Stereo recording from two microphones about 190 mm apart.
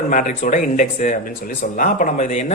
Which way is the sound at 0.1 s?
40° left (ahead or behind).